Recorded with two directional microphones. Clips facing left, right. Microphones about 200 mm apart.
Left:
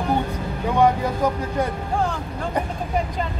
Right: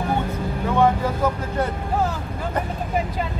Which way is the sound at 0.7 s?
15° left (ahead or behind).